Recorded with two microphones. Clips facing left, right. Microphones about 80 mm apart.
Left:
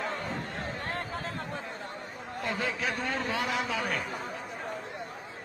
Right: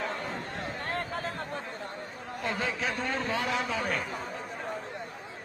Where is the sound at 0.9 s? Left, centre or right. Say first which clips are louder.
Right 2 dB; right.